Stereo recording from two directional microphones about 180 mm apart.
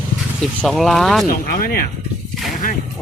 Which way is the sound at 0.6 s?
Centre (ahead or behind).